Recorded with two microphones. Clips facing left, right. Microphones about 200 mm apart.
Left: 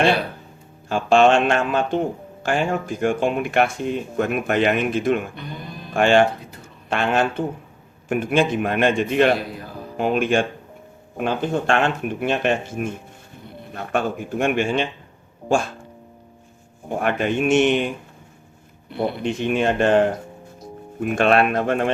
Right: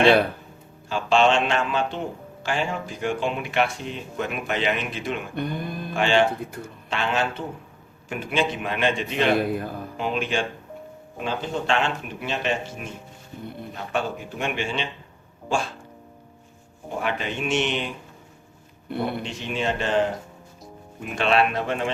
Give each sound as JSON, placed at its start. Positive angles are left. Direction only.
{"t": 0.9, "sound": "speech", "side_deg": 50}
{"t": 5.3, "sound": "speech", "side_deg": -55}
{"t": 5.9, "sound": "speech", "side_deg": 50}
{"t": 17.0, "sound": "speech", "side_deg": 55}
{"t": 19.2, "sound": "speech", "side_deg": 55}